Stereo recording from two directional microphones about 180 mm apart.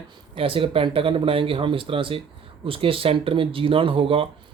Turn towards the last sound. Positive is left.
turn(degrees=-30)  # may be behind; listen again after turning